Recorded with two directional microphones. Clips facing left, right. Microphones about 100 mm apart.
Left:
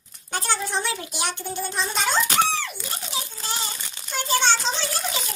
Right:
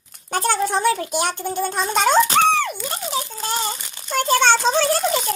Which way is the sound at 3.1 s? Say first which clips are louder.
Right 6 dB; 50° right (ahead or behind).